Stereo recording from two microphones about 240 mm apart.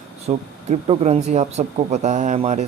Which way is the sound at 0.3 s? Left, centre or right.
Right.